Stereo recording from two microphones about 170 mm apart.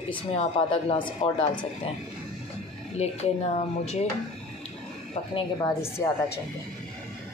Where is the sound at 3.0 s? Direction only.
40° left (ahead or behind).